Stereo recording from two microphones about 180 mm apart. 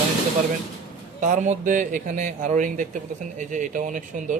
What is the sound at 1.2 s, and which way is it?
A man's voice, 45° right (ahead or behind).